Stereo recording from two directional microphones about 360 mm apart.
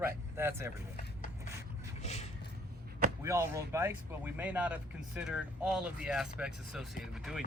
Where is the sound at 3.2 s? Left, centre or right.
Centre.